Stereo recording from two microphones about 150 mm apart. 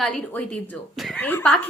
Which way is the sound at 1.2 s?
10° left (ahead or behind).